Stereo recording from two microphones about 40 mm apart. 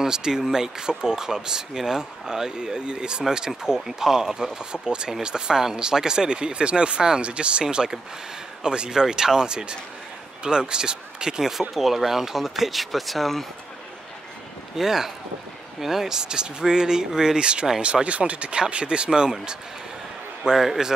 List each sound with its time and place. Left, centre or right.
0.0 s speech: centre
11.7 s speech: centre
14.8 s speech: centre
20.5 s speech: centre